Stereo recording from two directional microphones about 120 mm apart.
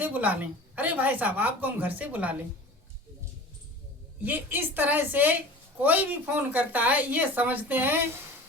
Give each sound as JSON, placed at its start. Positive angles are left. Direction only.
{"t": 0.0, "sound": "a woman's voice", "side_deg": -15}
{"t": 4.2, "sound": "a woman's voice", "side_deg": -15}